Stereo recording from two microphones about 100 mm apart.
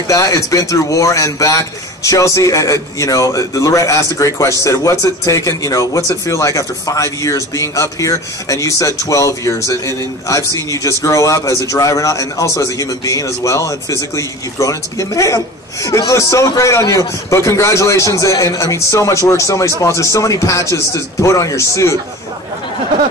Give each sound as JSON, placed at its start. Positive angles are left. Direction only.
{"t": 0.1, "sound": "a man's voice", "side_deg": 35}